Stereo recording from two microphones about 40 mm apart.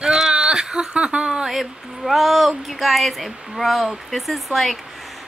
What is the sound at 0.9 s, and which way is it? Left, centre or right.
Speech, right.